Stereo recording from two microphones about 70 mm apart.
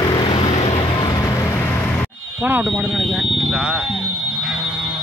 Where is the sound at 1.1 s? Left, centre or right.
Left.